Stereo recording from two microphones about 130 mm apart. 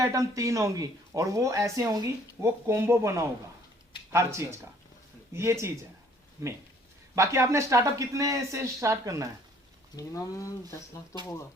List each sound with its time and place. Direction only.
0.0 s speech: 25° right (ahead or behind)
9.9 s speech: 25° left (ahead or behind)